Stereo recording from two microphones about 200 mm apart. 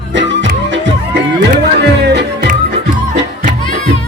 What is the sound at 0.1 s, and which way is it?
Music, 65° right (ahead or behind).